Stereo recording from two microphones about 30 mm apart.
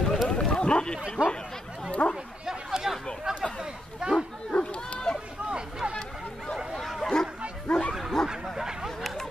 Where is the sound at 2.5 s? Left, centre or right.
Centre.